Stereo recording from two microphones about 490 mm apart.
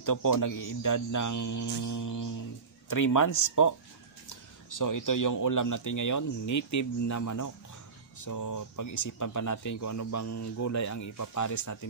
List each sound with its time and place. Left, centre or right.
0.0 s speech: left